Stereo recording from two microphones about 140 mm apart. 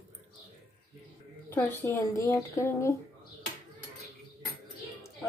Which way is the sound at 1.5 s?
15° left (ahead or behind).